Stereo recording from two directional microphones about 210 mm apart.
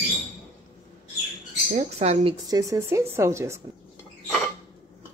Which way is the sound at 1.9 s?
30° right (ahead or behind).